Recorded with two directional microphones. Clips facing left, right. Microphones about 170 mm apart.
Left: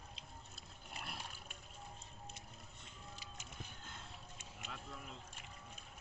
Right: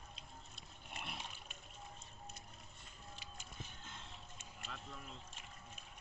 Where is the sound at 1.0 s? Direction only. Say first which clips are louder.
Right 1 dB; 5° left (ahead or behind).